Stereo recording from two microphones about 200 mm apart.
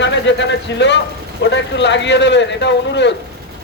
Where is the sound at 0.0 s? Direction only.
60° left (ahead or behind).